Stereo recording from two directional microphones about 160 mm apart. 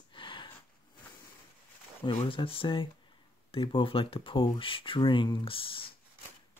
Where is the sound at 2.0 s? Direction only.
35° left (ahead or behind).